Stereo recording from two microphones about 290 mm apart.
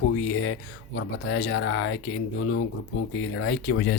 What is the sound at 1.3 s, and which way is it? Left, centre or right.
Speech, left.